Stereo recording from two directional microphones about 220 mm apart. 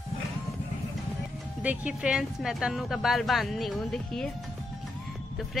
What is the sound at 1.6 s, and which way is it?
Speech, 5° right (ahead or behind).